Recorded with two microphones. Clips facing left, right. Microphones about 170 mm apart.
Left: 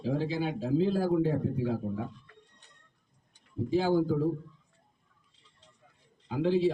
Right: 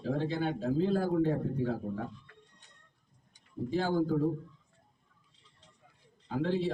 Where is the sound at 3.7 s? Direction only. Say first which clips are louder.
Left 4 dB; 10° left (ahead or behind).